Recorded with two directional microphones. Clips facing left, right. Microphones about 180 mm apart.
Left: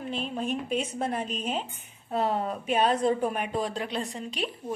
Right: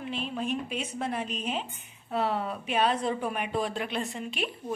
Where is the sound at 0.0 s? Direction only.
45° left (ahead or behind).